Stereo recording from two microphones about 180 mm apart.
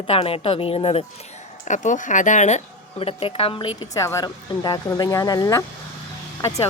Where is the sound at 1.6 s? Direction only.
45° left (ahead or behind).